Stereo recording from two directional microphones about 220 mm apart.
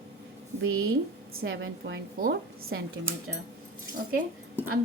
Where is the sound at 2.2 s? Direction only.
45° right (ahead or behind).